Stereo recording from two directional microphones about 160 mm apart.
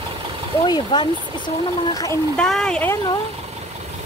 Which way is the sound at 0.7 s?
30° left (ahead or behind).